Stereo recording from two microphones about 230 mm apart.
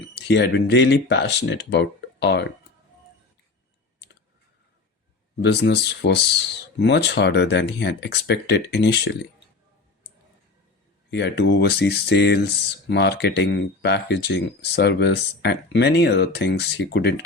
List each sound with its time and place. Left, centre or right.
0.1 s speech: left
5.4 s speech: left
11.1 s speech: left